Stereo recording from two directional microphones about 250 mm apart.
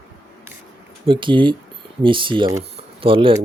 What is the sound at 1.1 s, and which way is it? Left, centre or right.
Speech, centre.